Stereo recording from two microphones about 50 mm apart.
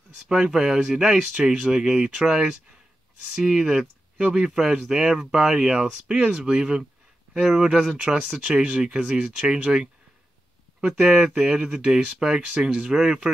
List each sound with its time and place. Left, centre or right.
0.3 s speech: centre
5.8 s speech: right